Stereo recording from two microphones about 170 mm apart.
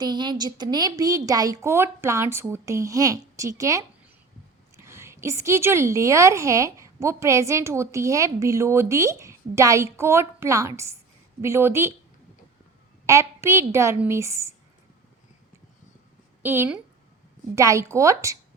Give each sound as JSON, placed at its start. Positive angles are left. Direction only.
{"t": 0.0, "sound": "a woman's voice", "side_deg": -25}
{"t": 13.1, "sound": "a woman's voice", "side_deg": -15}
{"t": 16.4, "sound": "a woman's voice", "side_deg": -10}